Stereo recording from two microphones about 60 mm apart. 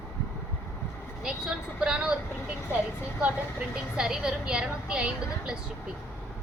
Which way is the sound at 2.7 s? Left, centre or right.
Left.